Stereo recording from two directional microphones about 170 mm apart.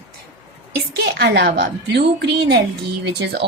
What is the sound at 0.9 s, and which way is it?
A woman's voice, 75° right (ahead or behind).